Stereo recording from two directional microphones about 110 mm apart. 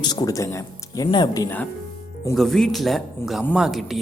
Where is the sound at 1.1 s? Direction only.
40° left (ahead or behind).